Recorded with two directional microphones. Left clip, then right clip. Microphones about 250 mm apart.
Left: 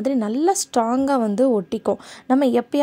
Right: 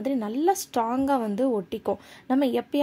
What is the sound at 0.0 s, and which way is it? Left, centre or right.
A woman's voice, left.